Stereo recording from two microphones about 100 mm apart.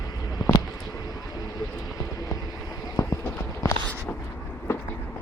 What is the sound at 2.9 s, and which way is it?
Clip-clop, 30° left (ahead or behind).